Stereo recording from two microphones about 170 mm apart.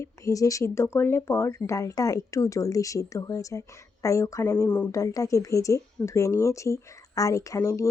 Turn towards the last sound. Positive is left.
turn(degrees=20)  # may be behind; listen again after turning